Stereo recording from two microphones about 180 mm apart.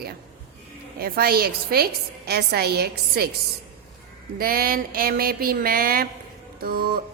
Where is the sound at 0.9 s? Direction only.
55° right (ahead or behind).